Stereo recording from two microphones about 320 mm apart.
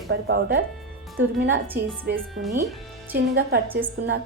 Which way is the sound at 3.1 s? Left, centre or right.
Right.